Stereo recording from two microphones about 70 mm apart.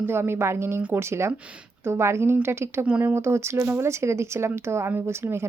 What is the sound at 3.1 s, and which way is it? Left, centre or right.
Speech, right.